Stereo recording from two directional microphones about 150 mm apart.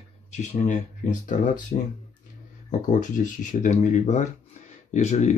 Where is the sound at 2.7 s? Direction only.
55° left (ahead or behind).